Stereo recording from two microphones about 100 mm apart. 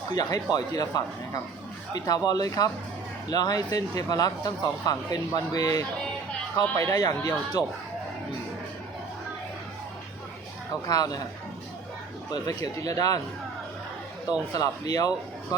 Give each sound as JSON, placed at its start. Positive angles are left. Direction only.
{"t": 0.1, "sound": "speech", "side_deg": 40}
{"t": 10.8, "sound": "speech", "side_deg": 40}
{"t": 12.3, "sound": "speech", "side_deg": 40}
{"t": 14.5, "sound": "speech", "side_deg": 40}